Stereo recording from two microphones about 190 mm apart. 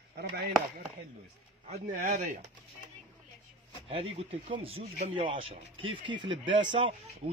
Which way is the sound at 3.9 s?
30° right (ahead or behind).